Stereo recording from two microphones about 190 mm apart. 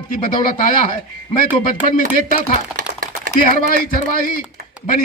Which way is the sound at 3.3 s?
50° left (ahead or behind).